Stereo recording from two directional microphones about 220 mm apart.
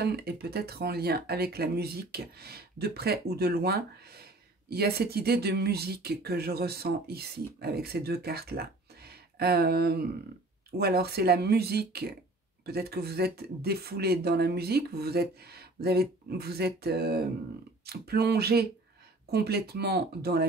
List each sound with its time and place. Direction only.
0.0 s speech: 45° right (ahead or behind)